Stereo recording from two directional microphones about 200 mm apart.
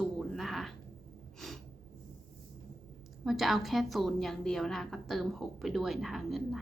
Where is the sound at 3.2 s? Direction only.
Centre (ahead or behind).